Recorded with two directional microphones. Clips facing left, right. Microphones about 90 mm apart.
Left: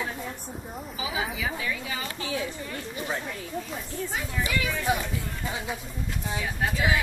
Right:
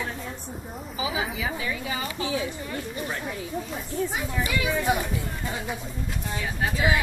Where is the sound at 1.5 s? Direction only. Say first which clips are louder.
Right 2 dB; 20° right (ahead or behind); by 7.0 s centre (ahead or behind).